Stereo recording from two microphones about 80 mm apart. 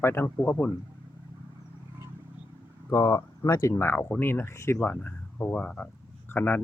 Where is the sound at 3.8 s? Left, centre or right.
Left.